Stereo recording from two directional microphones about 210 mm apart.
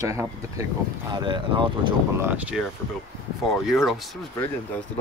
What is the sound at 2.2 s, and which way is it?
Speech, 5° right (ahead or behind).